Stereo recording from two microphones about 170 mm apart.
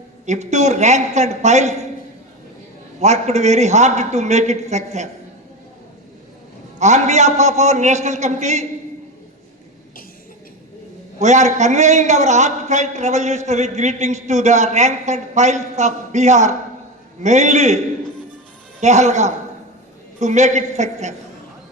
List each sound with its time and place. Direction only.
0.3 s a man's voice: 40° right (ahead or behind)
3.0 s a man's voice: 40° right (ahead or behind)
6.7 s a man's voice: 40° right (ahead or behind)
11.2 s a man's voice: 45° right (ahead or behind)